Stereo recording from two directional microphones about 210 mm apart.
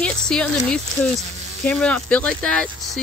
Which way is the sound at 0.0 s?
5° left (ahead or behind).